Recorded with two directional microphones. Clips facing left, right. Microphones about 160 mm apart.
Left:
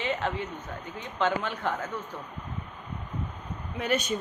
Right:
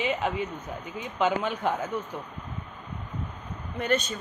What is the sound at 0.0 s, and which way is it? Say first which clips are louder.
Speech: right 2 dB; 15° right (ahead or behind).